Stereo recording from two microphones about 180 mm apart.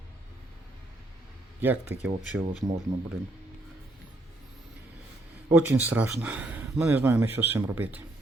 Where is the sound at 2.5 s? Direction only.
35° right (ahead or behind).